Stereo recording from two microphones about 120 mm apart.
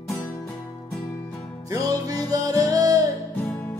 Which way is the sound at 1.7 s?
30° right (ahead or behind).